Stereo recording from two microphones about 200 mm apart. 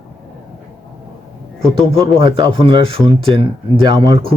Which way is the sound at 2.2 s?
25° right (ahead or behind).